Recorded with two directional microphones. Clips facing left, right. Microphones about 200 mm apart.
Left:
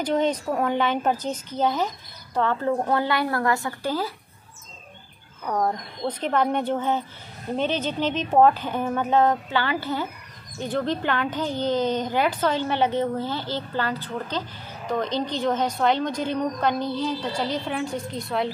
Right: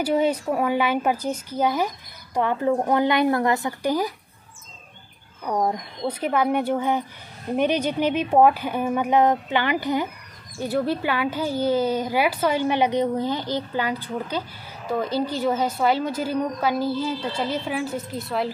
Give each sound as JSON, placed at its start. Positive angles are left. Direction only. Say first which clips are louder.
{"t": 0.0, "sound": "a woman's voice", "louder": "right 2 dB", "side_deg": -10}
{"t": 5.4, "sound": "a woman's voice", "louder": "right 1 dB", "side_deg": -15}